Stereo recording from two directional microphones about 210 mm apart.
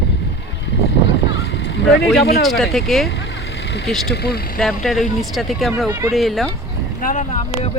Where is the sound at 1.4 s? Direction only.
55° left (ahead or behind).